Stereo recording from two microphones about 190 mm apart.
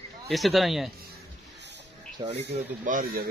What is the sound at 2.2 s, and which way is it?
Speech, 25° right (ahead or behind).